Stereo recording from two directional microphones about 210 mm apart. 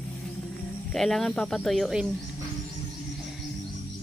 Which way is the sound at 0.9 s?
Centre (ahead or behind).